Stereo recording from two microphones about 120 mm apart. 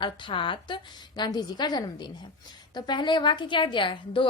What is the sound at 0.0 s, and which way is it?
A woman's voice, 45° left (ahead or behind).